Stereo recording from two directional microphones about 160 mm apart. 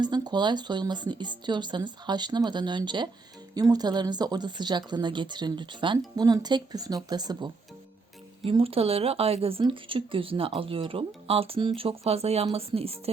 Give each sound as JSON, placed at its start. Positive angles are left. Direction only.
{"t": 0.0, "sound": "speech", "side_deg": -25}